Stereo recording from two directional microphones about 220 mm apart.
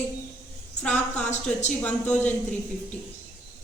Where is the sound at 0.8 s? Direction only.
5° left (ahead or behind).